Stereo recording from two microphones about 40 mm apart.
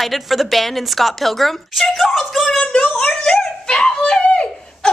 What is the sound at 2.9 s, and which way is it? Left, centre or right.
Speech, left.